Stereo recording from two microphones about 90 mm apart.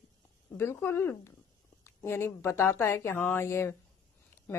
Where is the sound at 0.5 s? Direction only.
25° left (ahead or behind).